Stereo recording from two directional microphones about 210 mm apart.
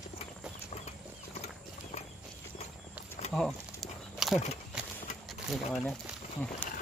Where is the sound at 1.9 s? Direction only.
30° left (ahead or behind).